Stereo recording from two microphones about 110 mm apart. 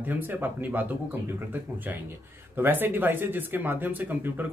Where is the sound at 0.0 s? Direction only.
15° right (ahead or behind).